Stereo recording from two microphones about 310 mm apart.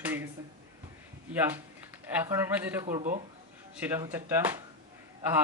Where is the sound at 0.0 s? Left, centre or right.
Centre.